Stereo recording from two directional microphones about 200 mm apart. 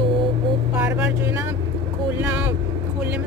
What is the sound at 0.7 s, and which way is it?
Speech, 10° right (ahead or behind).